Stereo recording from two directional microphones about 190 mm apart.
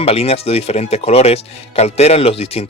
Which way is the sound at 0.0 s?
30° left (ahead or behind).